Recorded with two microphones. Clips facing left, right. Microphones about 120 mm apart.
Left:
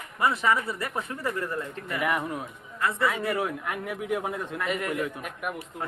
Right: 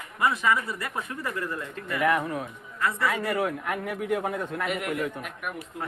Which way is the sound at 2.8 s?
20° left (ahead or behind).